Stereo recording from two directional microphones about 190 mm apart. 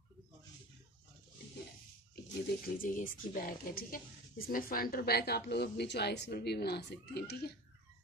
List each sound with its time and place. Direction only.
2.6 s speech: 45° left (ahead or behind)